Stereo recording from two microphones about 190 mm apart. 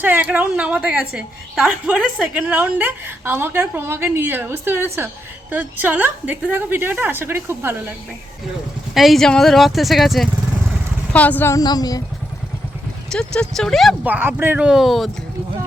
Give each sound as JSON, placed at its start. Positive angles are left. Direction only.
{"t": 0.0, "sound": "a woman's voice", "side_deg": -10}
{"t": 9.0, "sound": "a woman's voice", "side_deg": 0}
{"t": 13.1, "sound": "speech", "side_deg": 5}